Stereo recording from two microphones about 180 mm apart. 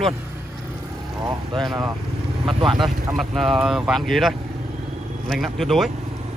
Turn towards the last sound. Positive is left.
turn(degrees=0)  # may be behind; listen again after turning